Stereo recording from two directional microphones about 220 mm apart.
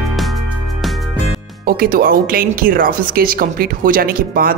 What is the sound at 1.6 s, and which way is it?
Speech, 40° right (ahead or behind).